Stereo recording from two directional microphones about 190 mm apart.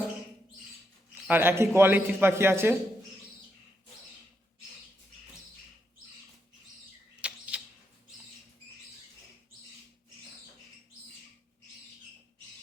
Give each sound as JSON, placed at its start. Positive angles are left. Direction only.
{"t": 1.1, "sound": "a man's voice", "side_deg": -10}
{"t": 7.2, "sound": "bird", "side_deg": -5}